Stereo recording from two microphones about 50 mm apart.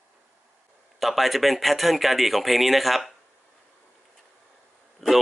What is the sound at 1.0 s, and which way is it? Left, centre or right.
Speech, centre.